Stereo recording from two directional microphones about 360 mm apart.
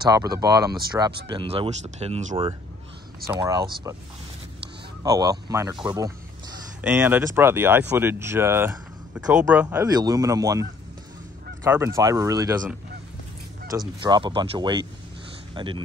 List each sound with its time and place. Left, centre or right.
0.0 s speech: centre
5.0 s speech: centre
13.7 s speech: centre